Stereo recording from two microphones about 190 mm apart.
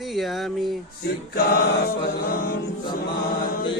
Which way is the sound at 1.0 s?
55° left (ahead or behind).